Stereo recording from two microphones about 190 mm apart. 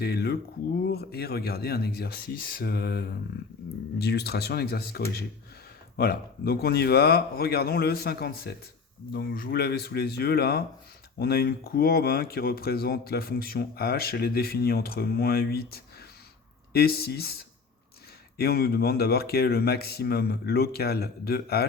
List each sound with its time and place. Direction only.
0.0 s speech: 55° left (ahead or behind)